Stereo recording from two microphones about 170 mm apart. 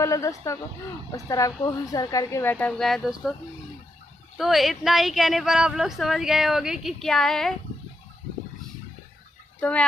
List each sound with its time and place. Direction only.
0.0 s a woman's voice: 20° left (ahead or behind); by 3.3 s centre (ahead or behind)
4.4 s speech: centre (ahead or behind)
9.6 s speech: 5° left (ahead or behind)